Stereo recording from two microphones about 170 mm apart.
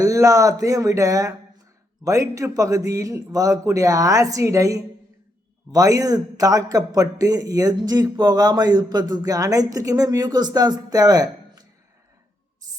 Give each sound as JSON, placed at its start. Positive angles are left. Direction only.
{"t": 0.0, "sound": "a man's voice", "side_deg": -20}